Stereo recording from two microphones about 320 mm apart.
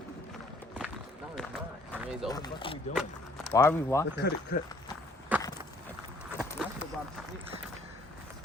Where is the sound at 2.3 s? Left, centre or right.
Centre.